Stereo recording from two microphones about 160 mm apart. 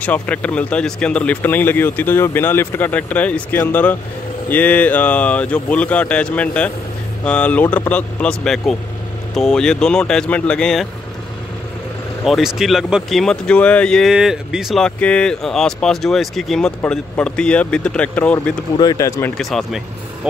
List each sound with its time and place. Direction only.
0.0 s speech: 10° left (ahead or behind)
12.3 s speech: centre (ahead or behind)
18.8 s speech: 20° left (ahead or behind)
19.3 s speech: centre (ahead or behind)